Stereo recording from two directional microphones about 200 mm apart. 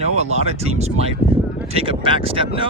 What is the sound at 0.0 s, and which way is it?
Speech, 35° right (ahead or behind).